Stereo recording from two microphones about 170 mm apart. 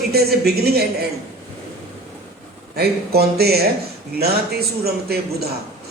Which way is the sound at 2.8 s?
65° right (ahead or behind).